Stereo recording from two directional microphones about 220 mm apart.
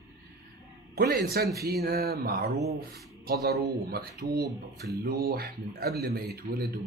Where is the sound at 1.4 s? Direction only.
45° right (ahead or behind).